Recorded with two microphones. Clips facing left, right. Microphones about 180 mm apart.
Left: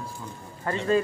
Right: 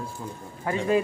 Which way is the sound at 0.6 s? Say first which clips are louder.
Even; 10° right (ahead or behind).